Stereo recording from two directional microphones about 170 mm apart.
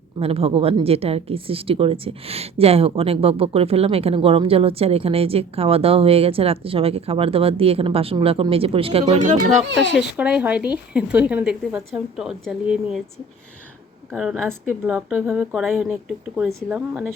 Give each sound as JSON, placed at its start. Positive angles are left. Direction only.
{"t": 0.2, "sound": "speech", "side_deg": -35}
{"t": 9.9, "sound": "speech", "side_deg": -5}
{"t": 14.1, "sound": "speech", "side_deg": 0}